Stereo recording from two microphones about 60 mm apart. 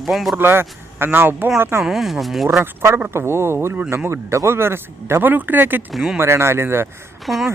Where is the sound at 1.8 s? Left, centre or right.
Centre.